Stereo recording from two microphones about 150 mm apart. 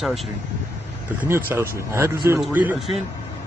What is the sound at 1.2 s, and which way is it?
A man's voice, 15° right (ahead or behind).